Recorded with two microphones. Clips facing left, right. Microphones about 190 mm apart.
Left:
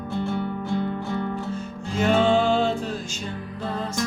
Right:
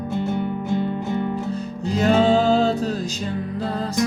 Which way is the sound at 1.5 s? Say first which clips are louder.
Right 4 dB; 40° right (ahead or behind).